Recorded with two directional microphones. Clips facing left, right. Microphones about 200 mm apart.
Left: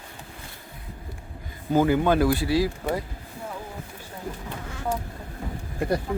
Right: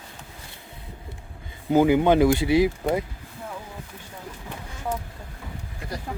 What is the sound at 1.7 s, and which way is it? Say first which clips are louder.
Speech: right 3 dB; 15° right (ahead or behind).